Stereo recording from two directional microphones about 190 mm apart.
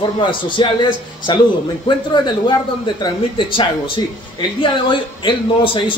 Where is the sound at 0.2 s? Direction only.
25° left (ahead or behind).